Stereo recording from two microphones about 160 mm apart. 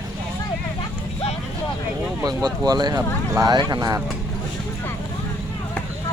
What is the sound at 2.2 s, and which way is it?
Speech, 25° right (ahead or behind).